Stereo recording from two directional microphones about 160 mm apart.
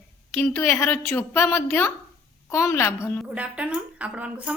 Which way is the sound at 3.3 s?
5° right (ahead or behind).